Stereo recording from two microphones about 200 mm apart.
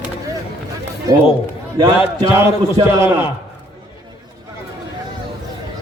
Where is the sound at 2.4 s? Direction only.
15° right (ahead or behind).